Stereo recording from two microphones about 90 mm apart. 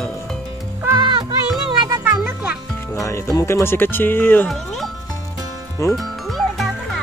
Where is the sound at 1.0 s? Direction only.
65° right (ahead or behind).